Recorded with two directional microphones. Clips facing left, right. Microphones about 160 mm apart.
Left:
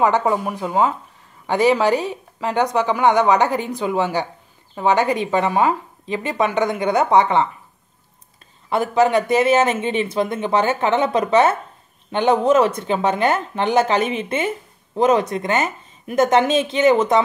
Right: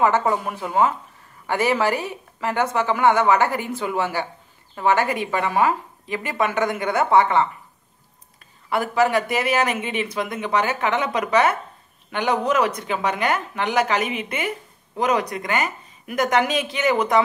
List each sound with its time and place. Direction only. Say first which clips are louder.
0.0 s a woman's voice: left 2 dB; 15° left (ahead or behind)
8.6 s speech: left 3 dB; 20° left (ahead or behind)